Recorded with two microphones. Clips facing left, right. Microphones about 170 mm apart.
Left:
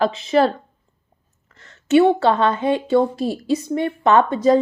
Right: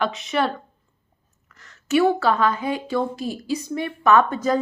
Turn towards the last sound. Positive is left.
turn(degrees=25)  # may be behind; listen again after turning